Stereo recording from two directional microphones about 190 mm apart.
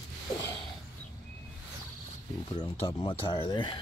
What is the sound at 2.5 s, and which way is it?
Speech, 30° left (ahead or behind).